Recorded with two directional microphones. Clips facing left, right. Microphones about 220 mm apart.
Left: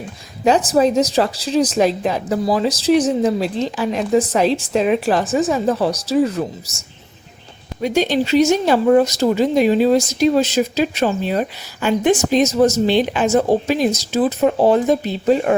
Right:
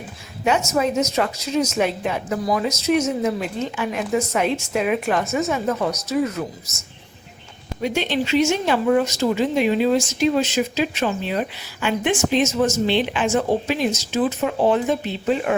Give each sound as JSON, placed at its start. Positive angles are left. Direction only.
{"t": 0.4, "sound": "speech", "side_deg": 35}
{"t": 7.8, "sound": "speech", "side_deg": 40}